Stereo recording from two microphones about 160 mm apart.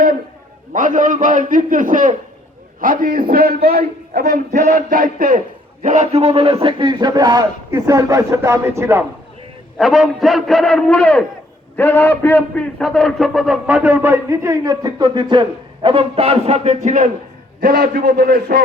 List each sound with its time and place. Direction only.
0.7 s a man's voice: 55° right (ahead or behind); by 4.4 s 70° right (ahead or behind)
4.5 s a man's voice: 55° right (ahead or behind)
5.8 s a man's voice: 45° right (ahead or behind); by 9.0 s 15° right (ahead or behind)
9.7 s a man's voice: centre (ahead or behind); by 17.1 s 50° right (ahead or behind)
17.6 s a man's voice: 65° right (ahead or behind)